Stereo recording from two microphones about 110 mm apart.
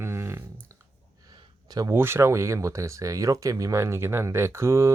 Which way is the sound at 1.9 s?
20° right (ahead or behind).